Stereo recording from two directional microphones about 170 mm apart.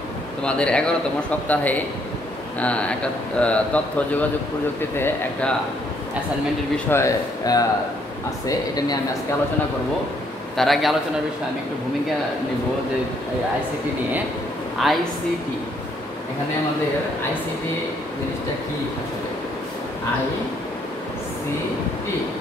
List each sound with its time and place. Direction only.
0.4 s a man's voice: 5° left (ahead or behind)
6.9 s speech: 15° left (ahead or behind)
10.6 s a man's voice: centre (ahead or behind)
14.8 s a man's voice: centre (ahead or behind)